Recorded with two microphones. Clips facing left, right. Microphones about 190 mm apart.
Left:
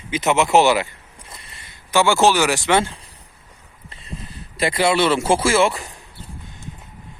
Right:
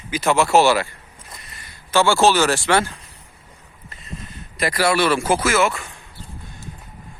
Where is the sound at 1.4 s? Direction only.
30° left (ahead or behind).